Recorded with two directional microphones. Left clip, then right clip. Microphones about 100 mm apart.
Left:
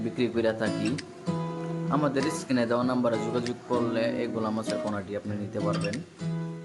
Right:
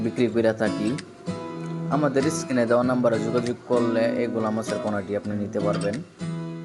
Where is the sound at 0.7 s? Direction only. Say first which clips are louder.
Right 3 dB; centre (ahead or behind).